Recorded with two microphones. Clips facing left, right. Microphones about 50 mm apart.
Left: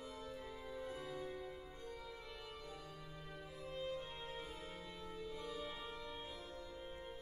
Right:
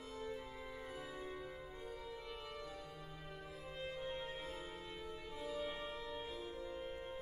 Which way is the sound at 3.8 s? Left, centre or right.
Right.